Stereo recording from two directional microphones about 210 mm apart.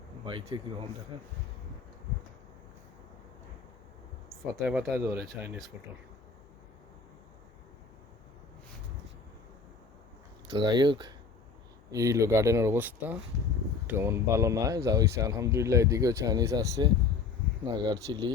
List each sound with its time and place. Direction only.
0.3 s speech: 25° right (ahead or behind)
4.6 s speech: centre (ahead or behind)
10.4 s speech: 20° right (ahead or behind)